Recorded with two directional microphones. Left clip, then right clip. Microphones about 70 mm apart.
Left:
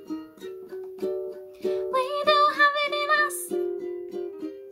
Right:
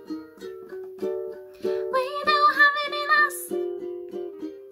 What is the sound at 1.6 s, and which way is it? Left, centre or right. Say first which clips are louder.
Music: right 1 dB; left.